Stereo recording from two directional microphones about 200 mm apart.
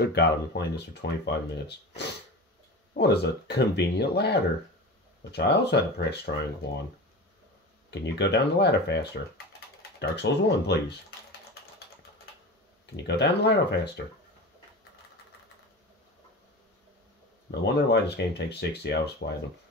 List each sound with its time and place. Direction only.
0.0 s speech: 55° left (ahead or behind)
7.9 s speech: 60° left (ahead or behind)
12.9 s speech: 55° left (ahead or behind)
17.5 s speech: 55° left (ahead or behind)